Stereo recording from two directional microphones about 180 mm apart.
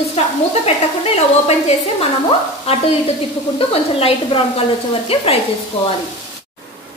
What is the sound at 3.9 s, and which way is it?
Stir, 30° left (ahead or behind).